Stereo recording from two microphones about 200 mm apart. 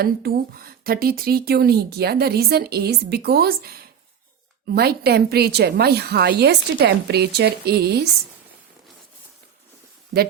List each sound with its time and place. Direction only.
0.0 s speech: 50° right (ahead or behind)